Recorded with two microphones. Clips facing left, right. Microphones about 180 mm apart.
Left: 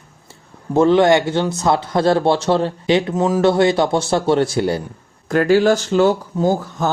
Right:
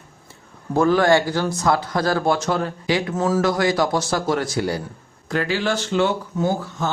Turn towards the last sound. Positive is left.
turn(degrees=40)  # may be behind; listen again after turning